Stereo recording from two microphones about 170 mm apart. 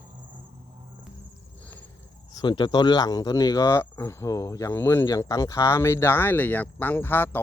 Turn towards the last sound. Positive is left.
turn(degrees=10)  # may be behind; listen again after turning